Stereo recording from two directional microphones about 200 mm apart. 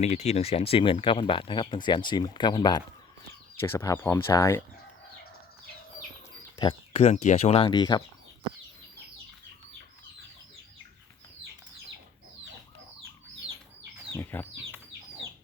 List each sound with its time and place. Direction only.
0.0 s speech: 35° left (ahead or behind); by 4.6 s 15° left (ahead or behind)
6.6 s speech: 30° left (ahead or behind)
14.1 s a sound: 10° left (ahead or behind)